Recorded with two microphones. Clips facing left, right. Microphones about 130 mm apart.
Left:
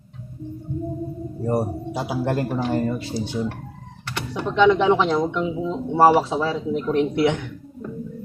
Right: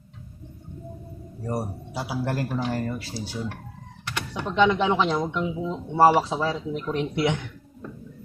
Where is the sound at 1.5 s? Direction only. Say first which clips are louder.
Left 7 dB; 25° left (ahead or behind).